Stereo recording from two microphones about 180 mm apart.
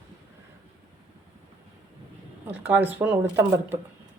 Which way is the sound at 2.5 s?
10° right (ahead or behind).